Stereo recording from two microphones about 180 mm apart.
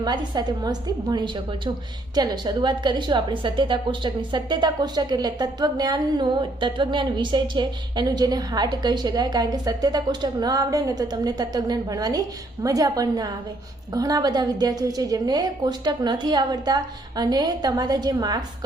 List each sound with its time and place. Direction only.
0.0 s speech: 25° right (ahead or behind)